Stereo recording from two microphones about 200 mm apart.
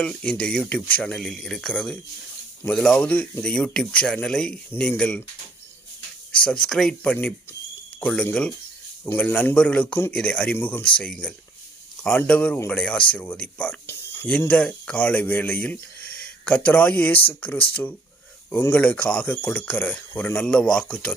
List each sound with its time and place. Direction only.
0.0 s speech: 5° left (ahead or behind)
6.4 s a man's voice: 5° left (ahead or behind)